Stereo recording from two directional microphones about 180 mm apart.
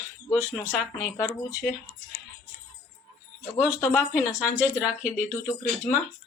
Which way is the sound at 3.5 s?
15° left (ahead or behind).